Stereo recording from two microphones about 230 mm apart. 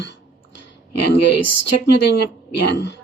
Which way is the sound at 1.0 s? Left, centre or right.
Left.